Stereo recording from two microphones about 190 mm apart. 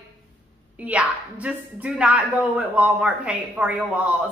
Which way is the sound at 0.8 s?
5° right (ahead or behind).